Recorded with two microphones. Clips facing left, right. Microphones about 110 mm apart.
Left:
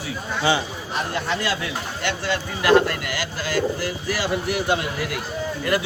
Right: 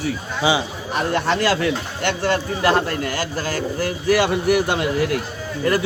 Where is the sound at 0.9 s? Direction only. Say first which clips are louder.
Right 6 dB; 65° right (ahead or behind).